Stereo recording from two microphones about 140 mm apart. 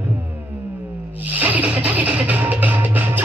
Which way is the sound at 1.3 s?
10° right (ahead or behind).